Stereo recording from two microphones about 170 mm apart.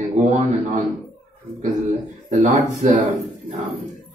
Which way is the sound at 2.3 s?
45° right (ahead or behind).